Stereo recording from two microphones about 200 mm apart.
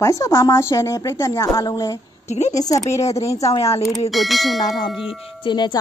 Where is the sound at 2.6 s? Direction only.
20° left (ahead or behind).